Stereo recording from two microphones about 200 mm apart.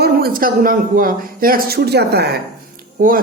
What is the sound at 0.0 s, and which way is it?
Speech, 50° right (ahead or behind).